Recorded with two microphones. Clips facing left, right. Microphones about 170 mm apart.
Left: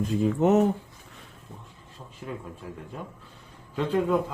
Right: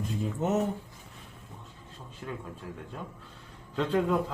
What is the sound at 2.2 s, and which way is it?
Speech, 15° left (ahead or behind).